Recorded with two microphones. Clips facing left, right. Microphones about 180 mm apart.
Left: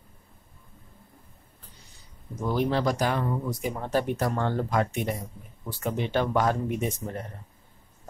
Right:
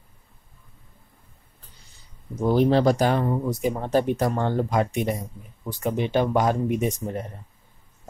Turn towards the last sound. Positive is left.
turn(degrees=-15)  # may be behind; listen again after turning